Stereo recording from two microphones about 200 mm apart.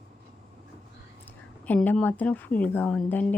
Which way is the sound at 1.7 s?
5° left (ahead or behind).